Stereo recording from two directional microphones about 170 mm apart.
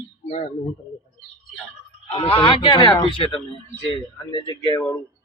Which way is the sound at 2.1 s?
30° left (ahead or behind).